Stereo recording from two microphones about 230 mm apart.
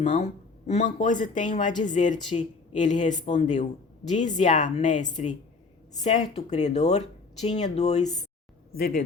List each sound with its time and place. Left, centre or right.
0.0 s speech: left